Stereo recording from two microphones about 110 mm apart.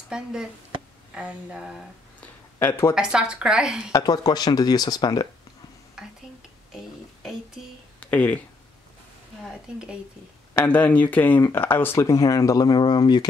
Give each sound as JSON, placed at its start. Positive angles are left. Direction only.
{"t": 0.1, "sound": "speech", "side_deg": -5}
{"t": 2.6, "sound": "speech", "side_deg": 20}
{"t": 2.9, "sound": "speech", "side_deg": -5}
{"t": 3.9, "sound": "speech", "side_deg": 35}
{"t": 6.0, "sound": "whispering", "side_deg": -5}
{"t": 8.0, "sound": "speech", "side_deg": 15}
{"t": 9.4, "sound": "speech", "side_deg": -5}
{"t": 10.6, "sound": "speech", "side_deg": 15}